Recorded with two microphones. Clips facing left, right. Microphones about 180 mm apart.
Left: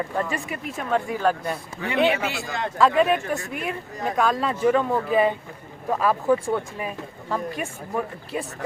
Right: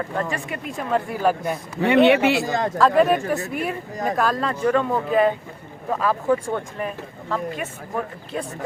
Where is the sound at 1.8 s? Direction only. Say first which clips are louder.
Right 7 dB; 70° right (ahead or behind).